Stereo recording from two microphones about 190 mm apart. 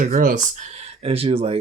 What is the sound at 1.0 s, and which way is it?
Speech, 30° right (ahead or behind).